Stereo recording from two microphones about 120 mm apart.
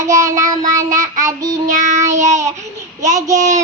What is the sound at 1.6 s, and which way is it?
Child singing, 85° right.